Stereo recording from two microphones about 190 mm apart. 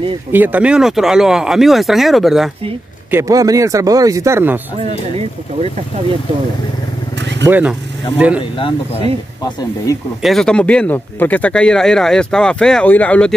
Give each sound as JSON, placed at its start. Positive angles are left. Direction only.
{"t": 0.3, "sound": "speech", "side_deg": -10}
{"t": 3.1, "sound": "speech", "side_deg": -15}
{"t": 4.8, "sound": "speech", "side_deg": -35}
{"t": 7.2, "sound": "vehicle", "side_deg": -65}
{"t": 7.4, "sound": "speech", "side_deg": -10}
{"t": 8.5, "sound": "speech", "side_deg": 25}
{"t": 10.2, "sound": "speech", "side_deg": 0}